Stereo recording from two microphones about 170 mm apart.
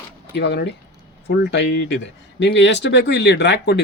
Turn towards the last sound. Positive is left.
turn(degrees=85)